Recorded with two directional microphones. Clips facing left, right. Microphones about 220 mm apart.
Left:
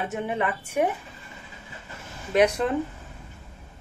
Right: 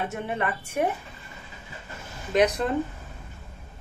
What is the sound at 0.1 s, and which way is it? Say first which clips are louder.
Speech: left 2 dB; 15° left (ahead or behind).